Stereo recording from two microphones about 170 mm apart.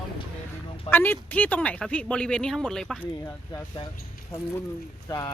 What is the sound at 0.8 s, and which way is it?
Speech, 10° left (ahead or behind).